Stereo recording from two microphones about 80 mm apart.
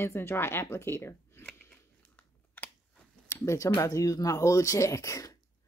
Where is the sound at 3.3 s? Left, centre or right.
Left.